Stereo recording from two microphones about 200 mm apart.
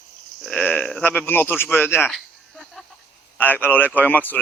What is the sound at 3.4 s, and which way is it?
Speech, 10° left (ahead or behind).